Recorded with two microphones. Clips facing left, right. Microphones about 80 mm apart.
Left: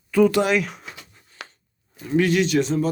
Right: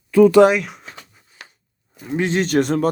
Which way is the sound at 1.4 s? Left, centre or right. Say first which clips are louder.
Left 3 dB; left.